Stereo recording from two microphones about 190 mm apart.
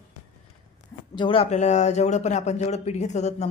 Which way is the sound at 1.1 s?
25° left (ahead or behind).